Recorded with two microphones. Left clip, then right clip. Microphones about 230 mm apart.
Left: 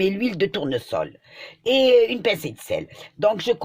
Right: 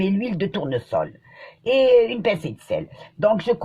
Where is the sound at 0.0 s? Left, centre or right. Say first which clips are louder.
Left 3 dB; left.